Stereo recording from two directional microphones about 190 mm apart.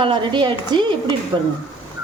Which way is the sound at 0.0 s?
25° right (ahead or behind).